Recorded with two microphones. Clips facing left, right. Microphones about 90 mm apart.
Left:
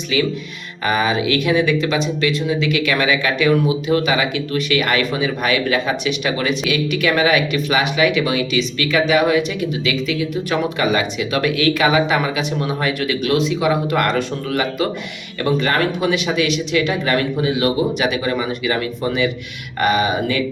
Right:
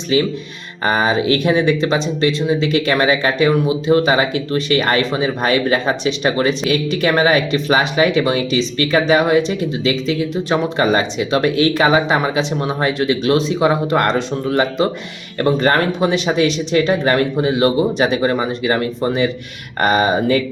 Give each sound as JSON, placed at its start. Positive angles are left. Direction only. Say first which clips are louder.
{"t": 0.9, "sound": "speech", "louder": "right 2 dB", "side_deg": -35}